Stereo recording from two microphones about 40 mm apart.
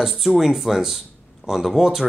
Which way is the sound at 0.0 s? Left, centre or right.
Centre.